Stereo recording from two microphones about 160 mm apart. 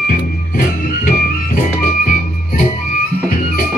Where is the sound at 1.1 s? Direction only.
55° left (ahead or behind).